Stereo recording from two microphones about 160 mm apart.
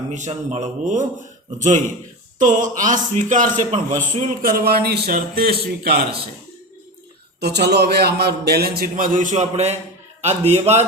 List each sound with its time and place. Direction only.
0.1 s a man's voice: 45° right (ahead or behind); by 6.1 s 70° right (ahead or behind)
7.3 s a man's voice: 90° right; by 10.8 s 45° right (ahead or behind)